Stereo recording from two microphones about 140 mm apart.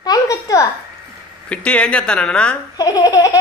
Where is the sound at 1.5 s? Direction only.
10° left (ahead or behind).